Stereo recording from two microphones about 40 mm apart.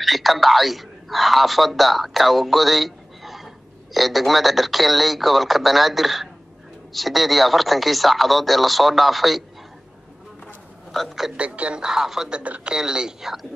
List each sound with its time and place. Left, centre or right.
0.0 s a man's voice: centre
10.9 s a woman's voice: centre
11.3 s speech: right
11.8 s speech: centre